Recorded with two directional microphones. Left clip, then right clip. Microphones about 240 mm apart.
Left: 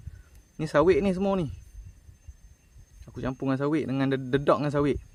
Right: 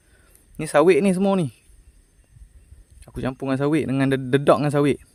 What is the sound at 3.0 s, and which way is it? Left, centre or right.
Speech, right.